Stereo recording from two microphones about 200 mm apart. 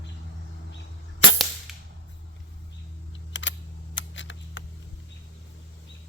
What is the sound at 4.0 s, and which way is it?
Camera, 65° left (ahead or behind).